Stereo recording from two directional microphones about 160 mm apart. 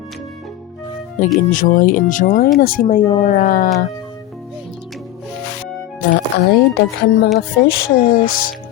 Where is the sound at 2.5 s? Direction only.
65° left (ahead or behind).